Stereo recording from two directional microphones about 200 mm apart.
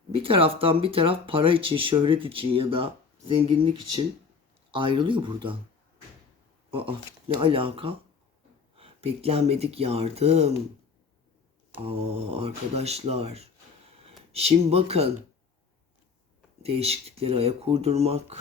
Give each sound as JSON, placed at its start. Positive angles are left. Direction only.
{"t": 0.2, "sound": "speech", "side_deg": -25}
{"t": 6.7, "sound": "speech", "side_deg": -25}
{"t": 11.9, "sound": "speech", "side_deg": -30}
{"t": 16.6, "sound": "speech", "side_deg": -30}